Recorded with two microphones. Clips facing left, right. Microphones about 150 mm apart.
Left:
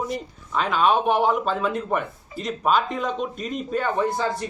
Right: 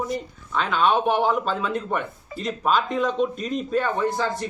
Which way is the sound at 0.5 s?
5° left (ahead or behind).